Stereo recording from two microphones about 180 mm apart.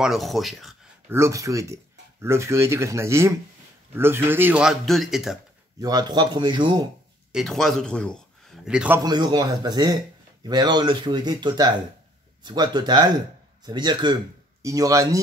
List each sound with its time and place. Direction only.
0.0 s a man's voice: centre (ahead or behind)
1.0 s a man's voice: 15° right (ahead or behind)
5.8 s speech: 20° right (ahead or behind)
7.3 s a man's voice: centre (ahead or behind)
9.0 s speech: 25° right (ahead or behind)